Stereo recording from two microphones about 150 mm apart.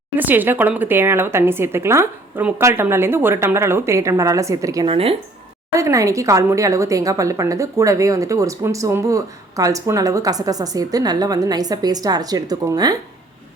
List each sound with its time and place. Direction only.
0.2 s speech: 10° right (ahead or behind)
4.9 s speech: 40° right (ahead or behind)
5.7 s a woman's voice: 20° right (ahead or behind)